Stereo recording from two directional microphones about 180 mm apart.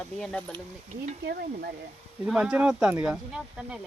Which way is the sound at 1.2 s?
60° right (ahead or behind).